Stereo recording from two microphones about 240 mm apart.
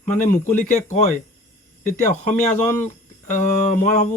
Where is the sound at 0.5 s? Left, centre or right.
Left.